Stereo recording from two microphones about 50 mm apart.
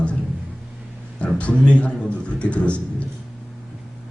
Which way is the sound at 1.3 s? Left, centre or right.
Left.